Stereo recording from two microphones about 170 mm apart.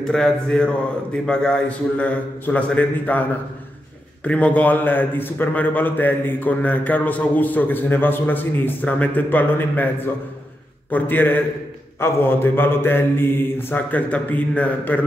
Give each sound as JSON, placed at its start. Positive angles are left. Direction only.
{"t": 0.0, "sound": "a man's voice", "side_deg": 5}